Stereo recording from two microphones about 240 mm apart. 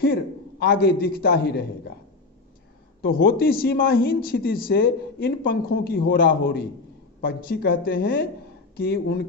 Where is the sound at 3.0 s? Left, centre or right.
Left.